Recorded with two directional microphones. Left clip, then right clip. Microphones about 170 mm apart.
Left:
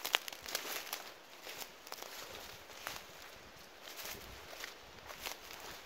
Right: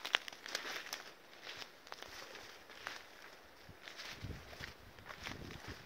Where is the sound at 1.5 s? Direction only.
20° left (ahead or behind).